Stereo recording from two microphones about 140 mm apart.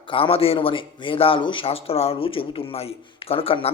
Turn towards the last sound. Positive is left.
turn(degrees=40)  # may be behind; listen again after turning